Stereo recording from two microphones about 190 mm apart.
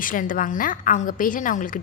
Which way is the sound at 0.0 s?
45° left (ahead or behind).